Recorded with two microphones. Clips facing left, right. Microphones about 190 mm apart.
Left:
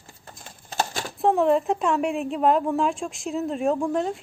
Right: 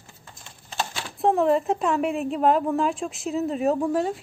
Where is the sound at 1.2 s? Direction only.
Centre (ahead or behind).